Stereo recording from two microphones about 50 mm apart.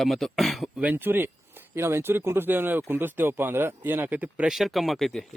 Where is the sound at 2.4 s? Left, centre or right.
Right.